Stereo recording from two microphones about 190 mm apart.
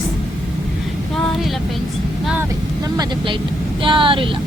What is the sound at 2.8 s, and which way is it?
Speech, 20° right (ahead or behind).